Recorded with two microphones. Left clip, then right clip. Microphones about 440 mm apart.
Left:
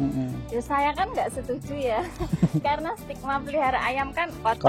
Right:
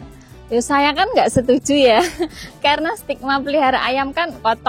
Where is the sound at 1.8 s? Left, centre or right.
Right.